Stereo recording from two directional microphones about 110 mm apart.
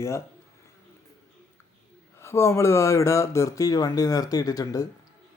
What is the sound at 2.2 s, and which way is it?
Speech, 25° left (ahead or behind).